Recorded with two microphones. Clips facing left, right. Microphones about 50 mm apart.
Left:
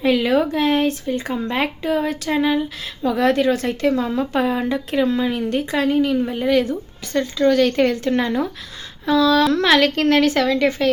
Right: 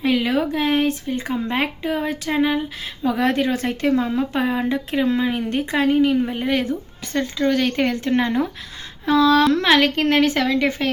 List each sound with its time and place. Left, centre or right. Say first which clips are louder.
0.0 s speech: left 3 dB; centre; by 4.2 s right
4.2 s speech: left 1 dB; centre
9.0 s a sound: even; right
9.5 s speech: left 1 dB; centre